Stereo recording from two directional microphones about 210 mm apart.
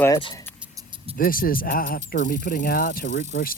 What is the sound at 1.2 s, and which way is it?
Speech, 45° left (ahead or behind).